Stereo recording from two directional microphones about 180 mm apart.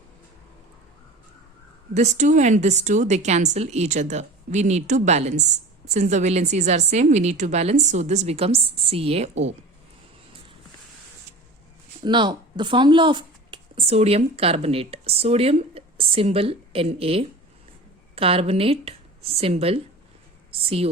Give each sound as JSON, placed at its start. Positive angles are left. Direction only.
{"t": 1.9, "sound": "a woman's voice", "side_deg": -40}
{"t": 9.3, "sound": "a woman's voice", "side_deg": -90}
{"t": 12.0, "sound": "speech", "side_deg": -25}